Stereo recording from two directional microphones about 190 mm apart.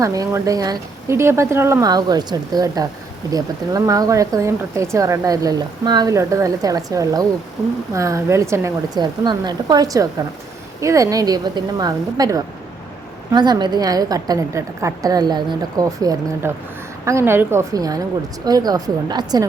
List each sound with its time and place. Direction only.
0.0 s a woman's voice: 15° right (ahead or behind)